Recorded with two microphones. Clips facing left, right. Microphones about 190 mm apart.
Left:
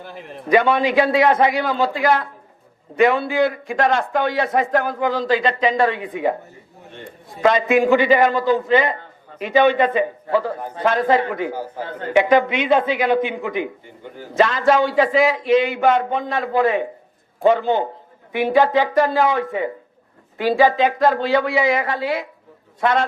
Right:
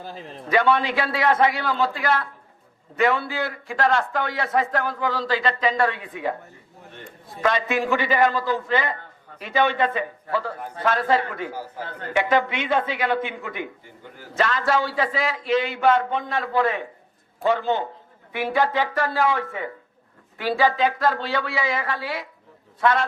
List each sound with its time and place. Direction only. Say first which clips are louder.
0.1 s a man's voice: left 1 dB; 25° right (ahead or behind)
0.4 s a man's voice: left 4 dB; 15° left (ahead or behind)
7.4 s a man's voice: left 7 dB; 20° left (ahead or behind)